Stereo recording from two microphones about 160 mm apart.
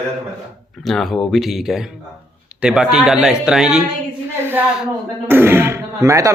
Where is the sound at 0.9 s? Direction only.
Centre (ahead or behind).